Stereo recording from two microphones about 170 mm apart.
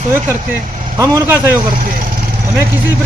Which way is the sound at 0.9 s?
15° right (ahead or behind).